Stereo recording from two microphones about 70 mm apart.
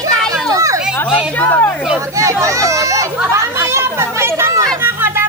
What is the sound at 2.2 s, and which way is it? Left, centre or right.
Chatter, right.